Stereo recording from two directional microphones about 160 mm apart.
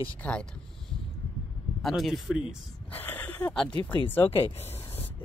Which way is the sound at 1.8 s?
Centre (ahead or behind).